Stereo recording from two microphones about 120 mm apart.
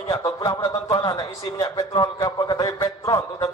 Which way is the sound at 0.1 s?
30° left (ahead or behind).